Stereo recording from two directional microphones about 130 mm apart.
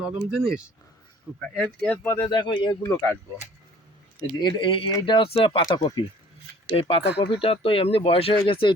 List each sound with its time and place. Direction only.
0.0 s speech: 5° right (ahead or behind)
2.0 s speech: 30° left (ahead or behind)
2.8 s speech: 20° left (ahead or behind)
4.4 s speech: 35° left (ahead or behind)
6.7 s speech: 45° left (ahead or behind)